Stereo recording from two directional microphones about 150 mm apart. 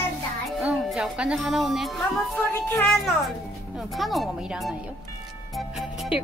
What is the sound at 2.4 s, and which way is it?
Speech, 15° left (ahead or behind).